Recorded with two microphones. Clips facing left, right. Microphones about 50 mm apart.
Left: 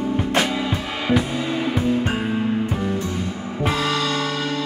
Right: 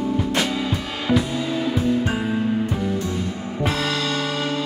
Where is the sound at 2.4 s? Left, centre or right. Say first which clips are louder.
Even; left.